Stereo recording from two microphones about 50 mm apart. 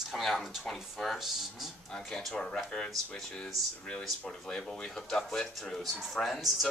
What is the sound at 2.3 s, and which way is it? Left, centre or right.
Speech, centre.